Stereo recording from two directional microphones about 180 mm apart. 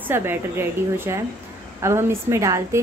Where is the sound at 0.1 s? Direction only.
10° right (ahead or behind).